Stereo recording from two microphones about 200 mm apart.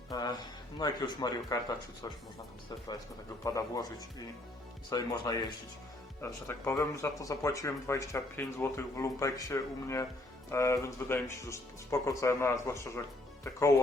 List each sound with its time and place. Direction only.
0.1 s a sound: 20° left (ahead or behind)
0.8 s speech: 20° left (ahead or behind)
3.4 s speech: 15° left (ahead or behind)
4.9 s speech: 20° left (ahead or behind)